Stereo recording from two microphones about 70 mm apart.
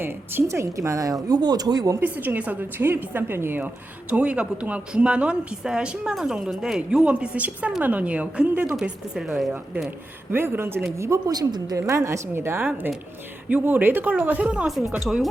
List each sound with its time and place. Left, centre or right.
0.4 s a woman's voice: right
1.3 s speech: right
2.0 s a woman's voice: right
4.1 s a woman's voice: centre
8.6 s speech: centre
10.3 s a woman's voice: right
11.3 s speech: right
11.8 s a woman's voice: right
14.4 s speech: centre
15.0 s speech: centre